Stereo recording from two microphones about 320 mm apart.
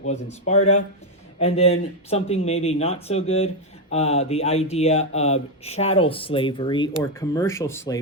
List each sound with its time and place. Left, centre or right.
0.1 s speech: left